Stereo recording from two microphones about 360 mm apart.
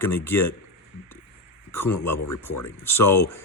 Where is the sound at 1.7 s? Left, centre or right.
Centre.